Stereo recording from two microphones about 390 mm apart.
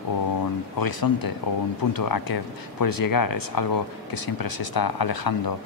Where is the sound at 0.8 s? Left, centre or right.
Left.